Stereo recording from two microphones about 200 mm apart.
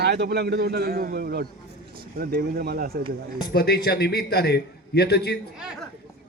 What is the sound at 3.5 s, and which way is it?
A man's voice, 55° left (ahead or behind).